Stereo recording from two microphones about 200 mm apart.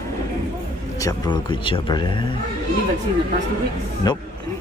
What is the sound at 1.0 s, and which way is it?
Speech, 20° left (ahead or behind).